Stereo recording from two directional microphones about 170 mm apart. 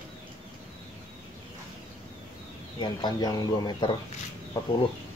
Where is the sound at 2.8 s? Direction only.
25° left (ahead or behind).